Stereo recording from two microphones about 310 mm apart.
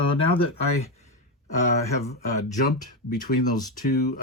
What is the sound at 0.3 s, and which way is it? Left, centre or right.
Speech, centre.